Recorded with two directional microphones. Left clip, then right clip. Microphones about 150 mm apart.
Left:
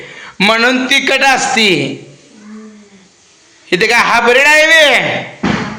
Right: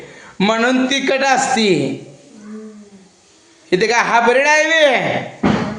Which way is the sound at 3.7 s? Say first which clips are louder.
Left 4 dB; 10° right (ahead or behind).